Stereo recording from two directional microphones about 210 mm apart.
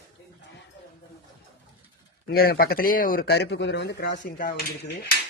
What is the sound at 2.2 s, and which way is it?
A man's voice, 45° left (ahead or behind).